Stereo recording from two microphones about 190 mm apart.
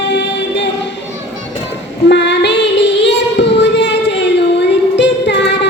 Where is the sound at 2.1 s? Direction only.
65° left (ahead or behind).